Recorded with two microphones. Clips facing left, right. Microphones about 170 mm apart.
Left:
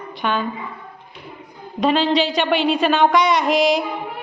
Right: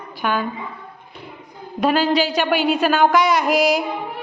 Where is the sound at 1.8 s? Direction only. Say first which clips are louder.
Even; 5° right (ahead or behind).